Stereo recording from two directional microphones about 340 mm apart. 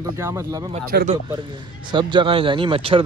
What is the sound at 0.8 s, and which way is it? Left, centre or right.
Speech, right.